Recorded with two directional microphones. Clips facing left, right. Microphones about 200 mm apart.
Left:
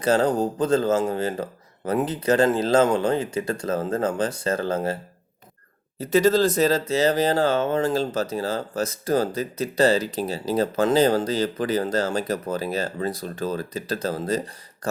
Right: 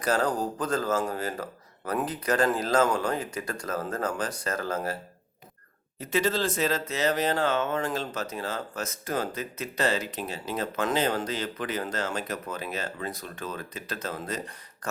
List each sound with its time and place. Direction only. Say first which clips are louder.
0.0 s speech: left 6 dB; 25° left (ahead or behind)
6.0 s speech: left 8 dB; 40° left (ahead or behind)